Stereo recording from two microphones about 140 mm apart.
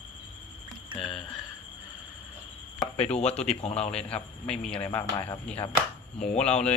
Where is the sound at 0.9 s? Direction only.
35° right (ahead or behind).